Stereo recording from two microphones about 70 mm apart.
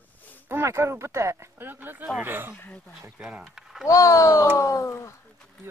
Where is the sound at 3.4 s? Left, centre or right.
Centre.